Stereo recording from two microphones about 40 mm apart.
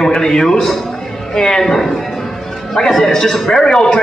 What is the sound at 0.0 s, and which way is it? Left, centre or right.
A man's voice, centre.